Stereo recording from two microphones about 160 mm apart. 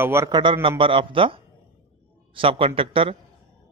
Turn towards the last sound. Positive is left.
turn(degrees=-35)  # may be behind; listen again after turning